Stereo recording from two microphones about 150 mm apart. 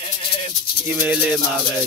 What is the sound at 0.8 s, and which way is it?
Maraca, 10° right (ahead or behind).